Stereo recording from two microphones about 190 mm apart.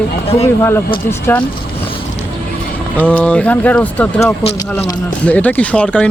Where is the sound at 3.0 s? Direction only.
5° left (ahead or behind).